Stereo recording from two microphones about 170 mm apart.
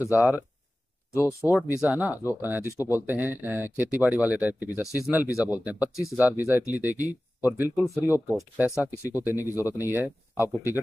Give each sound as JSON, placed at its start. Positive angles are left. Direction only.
{"t": 0.1, "sound": "speech", "side_deg": -10}
{"t": 1.1, "sound": "speech", "side_deg": 15}
{"t": 1.7, "sound": "speech", "side_deg": -10}